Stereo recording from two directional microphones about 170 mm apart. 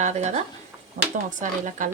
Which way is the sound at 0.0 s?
45° right (ahead or behind).